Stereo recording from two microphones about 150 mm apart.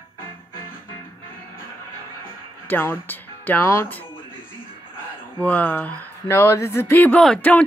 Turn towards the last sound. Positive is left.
turn(degrees=5)  # may be behind; listen again after turning